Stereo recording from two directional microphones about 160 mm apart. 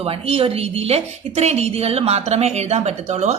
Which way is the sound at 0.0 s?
35° right (ahead or behind).